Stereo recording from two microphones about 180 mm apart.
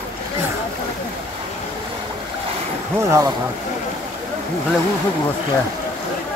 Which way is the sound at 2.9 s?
15° right (ahead or behind).